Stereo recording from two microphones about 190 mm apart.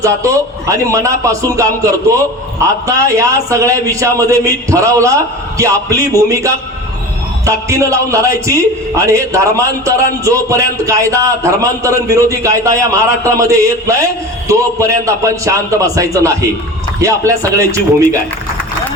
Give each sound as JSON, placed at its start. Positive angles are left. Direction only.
{"t": 0.0, "sound": "a man's voice", "side_deg": -15}